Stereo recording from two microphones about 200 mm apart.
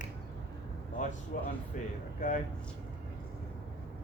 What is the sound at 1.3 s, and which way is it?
Speech, 45° left (ahead or behind).